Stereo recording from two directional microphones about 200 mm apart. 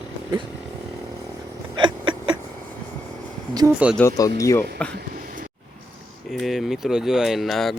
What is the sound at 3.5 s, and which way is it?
Speech, 20° right (ahead or behind).